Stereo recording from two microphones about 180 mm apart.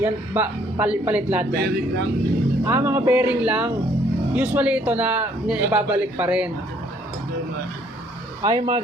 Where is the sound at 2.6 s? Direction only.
15° right (ahead or behind).